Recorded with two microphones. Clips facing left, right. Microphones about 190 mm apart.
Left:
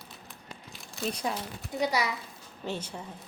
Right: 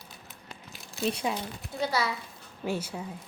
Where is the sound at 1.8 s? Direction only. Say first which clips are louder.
Even; 15° left (ahead or behind).